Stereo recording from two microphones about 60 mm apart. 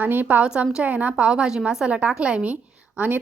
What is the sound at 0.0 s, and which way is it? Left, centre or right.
Speech, right.